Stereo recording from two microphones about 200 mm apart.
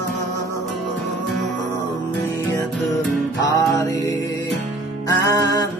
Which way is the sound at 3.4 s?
15° left (ahead or behind).